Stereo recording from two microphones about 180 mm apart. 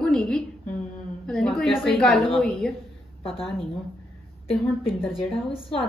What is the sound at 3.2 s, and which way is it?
Speech, 30° left (ahead or behind).